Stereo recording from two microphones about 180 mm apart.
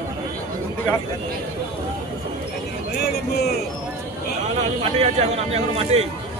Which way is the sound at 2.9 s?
60° left (ahead or behind).